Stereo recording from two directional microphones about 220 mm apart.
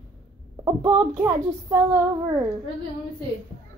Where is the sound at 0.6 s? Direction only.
15° right (ahead or behind).